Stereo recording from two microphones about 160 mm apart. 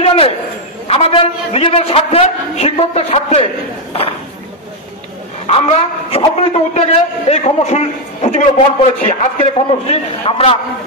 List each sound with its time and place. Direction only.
0.0 s a sound: 35° left (ahead or behind)
0.8 s a man's voice: 40° left (ahead or behind)
5.5 s a man's voice: 35° left (ahead or behind)
9.5 s a man's voice: 35° left (ahead or behind)